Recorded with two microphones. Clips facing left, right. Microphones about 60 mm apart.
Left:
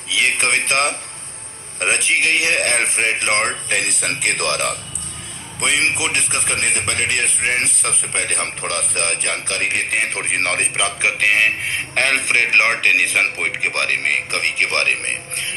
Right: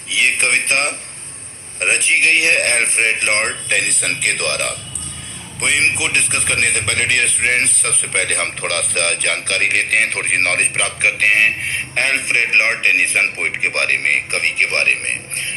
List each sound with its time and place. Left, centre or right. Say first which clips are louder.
0.1 s a man's voice: right 1 dB; right
5.5 s a man's voice: right 2 dB; right
6.1 s speech: right 4 dB; right
8.1 s a man's voice: right 6 dB; right
10.2 s a man's voice: right 3 dB; right
11.9 s a man's voice: even; right